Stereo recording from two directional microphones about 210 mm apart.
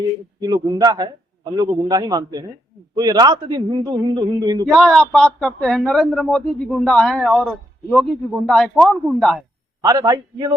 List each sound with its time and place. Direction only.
0.3 s a man's voice: 20° right (ahead or behind)
4.6 s speech: centre (ahead or behind)
9.8 s a man's voice: 20° right (ahead or behind)